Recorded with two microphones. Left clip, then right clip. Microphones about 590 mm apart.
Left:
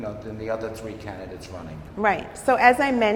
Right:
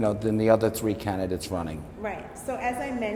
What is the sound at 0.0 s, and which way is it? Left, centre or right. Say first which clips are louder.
A man's voice: right 8 dB; right.